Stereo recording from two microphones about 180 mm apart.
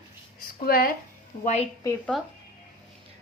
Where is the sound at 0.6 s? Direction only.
55° left (ahead or behind).